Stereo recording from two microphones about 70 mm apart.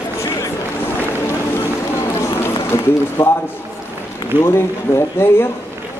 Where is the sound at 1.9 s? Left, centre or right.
Left.